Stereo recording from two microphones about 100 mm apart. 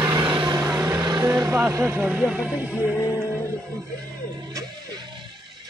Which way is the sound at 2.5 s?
15° right (ahead or behind).